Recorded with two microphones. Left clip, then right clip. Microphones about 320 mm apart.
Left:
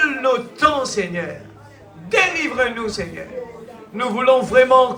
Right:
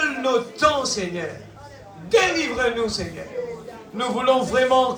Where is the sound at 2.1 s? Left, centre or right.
Left.